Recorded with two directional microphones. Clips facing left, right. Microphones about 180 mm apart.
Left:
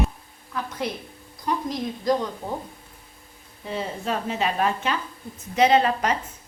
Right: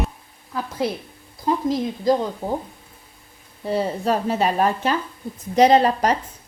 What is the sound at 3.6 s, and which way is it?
Speech, 40° right (ahead or behind).